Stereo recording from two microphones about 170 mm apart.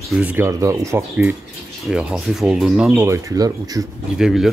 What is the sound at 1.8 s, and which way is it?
Speech, centre (ahead or behind).